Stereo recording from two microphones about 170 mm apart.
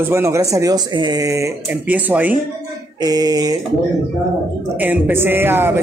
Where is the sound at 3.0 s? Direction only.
25° right (ahead or behind).